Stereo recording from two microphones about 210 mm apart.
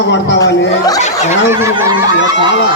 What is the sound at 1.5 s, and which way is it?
Snicker, 15° right (ahead or behind).